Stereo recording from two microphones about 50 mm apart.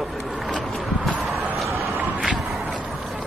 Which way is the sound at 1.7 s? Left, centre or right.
Right.